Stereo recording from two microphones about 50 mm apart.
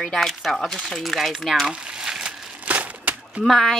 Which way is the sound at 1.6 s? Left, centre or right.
Centre.